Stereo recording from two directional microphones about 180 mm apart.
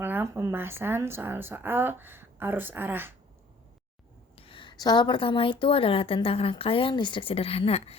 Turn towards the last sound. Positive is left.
turn(degrees=35)  # may be behind; listen again after turning